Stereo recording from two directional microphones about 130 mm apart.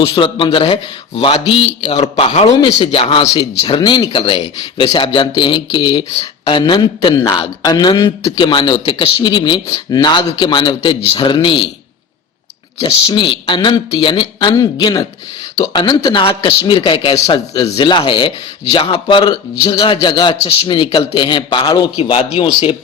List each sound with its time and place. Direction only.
0.0 s a man's voice: 45° left (ahead or behind)
12.8 s speech: 35° left (ahead or behind)